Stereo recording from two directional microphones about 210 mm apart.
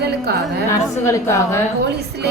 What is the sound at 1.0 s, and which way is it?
Speech, 15° left (ahead or behind).